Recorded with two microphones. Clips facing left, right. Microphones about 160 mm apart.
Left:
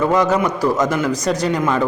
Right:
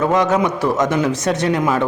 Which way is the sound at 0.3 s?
20° right (ahead or behind).